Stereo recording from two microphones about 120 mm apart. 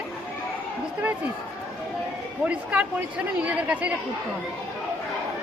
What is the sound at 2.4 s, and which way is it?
Speech, 10° right (ahead or behind).